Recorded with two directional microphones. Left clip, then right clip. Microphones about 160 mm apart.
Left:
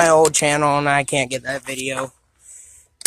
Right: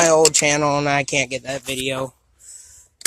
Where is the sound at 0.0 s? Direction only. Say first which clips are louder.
Left 1 dB; 5° left (ahead or behind).